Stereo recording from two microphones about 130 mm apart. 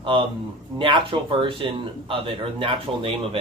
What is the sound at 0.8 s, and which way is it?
Speech, 40° right (ahead or behind).